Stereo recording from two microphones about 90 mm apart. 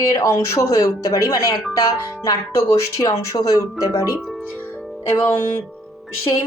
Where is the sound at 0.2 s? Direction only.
35° left (ahead or behind).